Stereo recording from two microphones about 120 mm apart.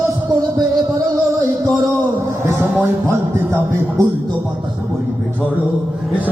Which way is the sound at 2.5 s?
20° right (ahead or behind).